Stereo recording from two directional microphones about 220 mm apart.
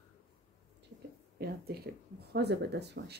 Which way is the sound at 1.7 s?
45° right (ahead or behind).